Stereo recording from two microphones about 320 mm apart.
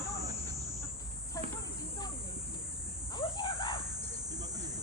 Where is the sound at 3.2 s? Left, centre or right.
Centre.